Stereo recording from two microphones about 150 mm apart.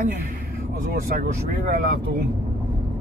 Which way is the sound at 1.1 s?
65° right (ahead or behind).